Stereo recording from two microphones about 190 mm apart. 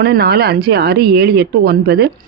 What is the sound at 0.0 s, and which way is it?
A woman's voice, 55° right (ahead or behind).